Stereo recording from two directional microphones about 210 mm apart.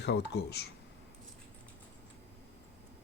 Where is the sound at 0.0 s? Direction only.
55° left (ahead or behind).